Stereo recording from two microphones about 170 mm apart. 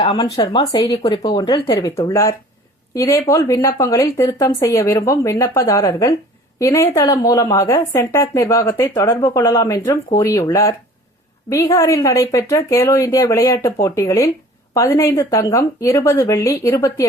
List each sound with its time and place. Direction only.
0.0 s a woman's voice: 30° left (ahead or behind)